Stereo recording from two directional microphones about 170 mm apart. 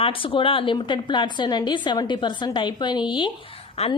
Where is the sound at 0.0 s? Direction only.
30° left (ahead or behind).